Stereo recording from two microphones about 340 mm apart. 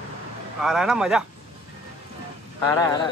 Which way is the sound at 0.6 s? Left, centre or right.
Centre.